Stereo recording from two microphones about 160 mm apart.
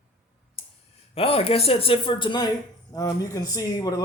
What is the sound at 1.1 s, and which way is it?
A man's voice, 35° left (ahead or behind).